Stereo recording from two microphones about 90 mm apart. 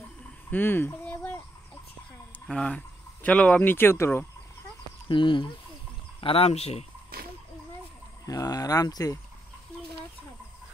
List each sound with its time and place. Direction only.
0.5 s a sound: 20° left (ahead or behind)
2.5 s speech: 10° left (ahead or behind)
5.0 s speech: 60° left (ahead or behind)
6.2 s speech: 90° left
8.3 s speech: 45° left (ahead or behind)